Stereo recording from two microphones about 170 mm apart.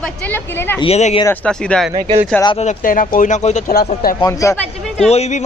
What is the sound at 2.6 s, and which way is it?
Speech, 50° left (ahead or behind).